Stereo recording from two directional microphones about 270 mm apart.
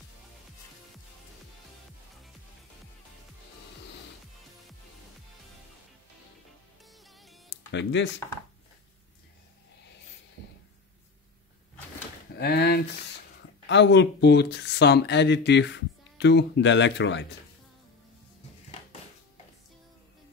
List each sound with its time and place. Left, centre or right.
7.1 s music: centre
7.7 s speech: left
12.4 s a sound: left
13.7 s speech: left